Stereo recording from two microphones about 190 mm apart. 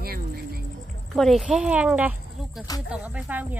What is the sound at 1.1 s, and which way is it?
A woman's voice, centre (ahead or behind).